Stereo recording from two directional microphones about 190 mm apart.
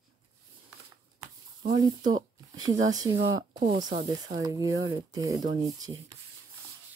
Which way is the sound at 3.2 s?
30° right (ahead or behind).